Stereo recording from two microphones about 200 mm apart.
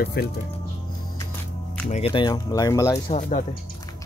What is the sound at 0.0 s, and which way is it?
Speech, 50° left (ahead or behind).